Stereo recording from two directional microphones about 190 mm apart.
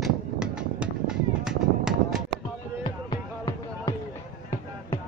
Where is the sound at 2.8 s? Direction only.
25° left (ahead or behind).